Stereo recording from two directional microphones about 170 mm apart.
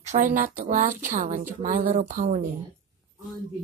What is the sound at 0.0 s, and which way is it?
A woman's voice, 45° right (ahead or behind).